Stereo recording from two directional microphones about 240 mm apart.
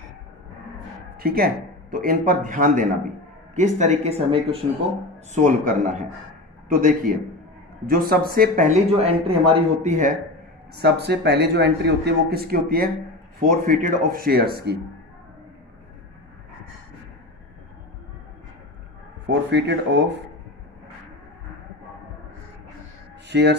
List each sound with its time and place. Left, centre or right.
1.1 s speech: right
6.8 s speech: right
10.7 s a man's voice: right
19.2 s a man's voice: right
23.2 s a sound: right